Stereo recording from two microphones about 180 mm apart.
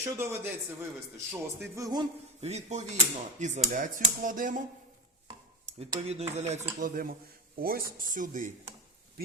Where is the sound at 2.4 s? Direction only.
40° right (ahead or behind).